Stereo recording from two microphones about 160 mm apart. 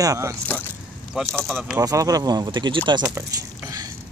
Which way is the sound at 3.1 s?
20° right (ahead or behind).